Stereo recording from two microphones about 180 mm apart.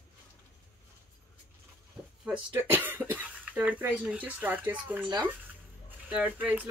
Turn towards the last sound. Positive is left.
turn(degrees=-10)  # may be behind; listen again after turning